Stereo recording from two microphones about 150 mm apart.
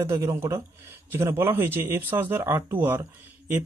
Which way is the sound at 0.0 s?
20° right (ahead or behind).